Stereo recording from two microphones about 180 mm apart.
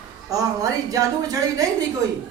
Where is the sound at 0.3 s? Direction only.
20° right (ahead or behind).